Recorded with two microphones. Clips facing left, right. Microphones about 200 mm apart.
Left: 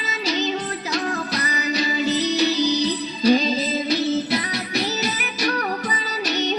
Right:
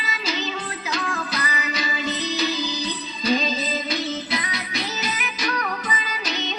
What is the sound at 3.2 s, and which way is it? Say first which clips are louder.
Music: left 5 dB; 35° left (ahead or behind).